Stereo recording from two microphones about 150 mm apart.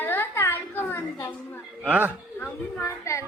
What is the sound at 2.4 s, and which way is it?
Speech, 20° left (ahead or behind).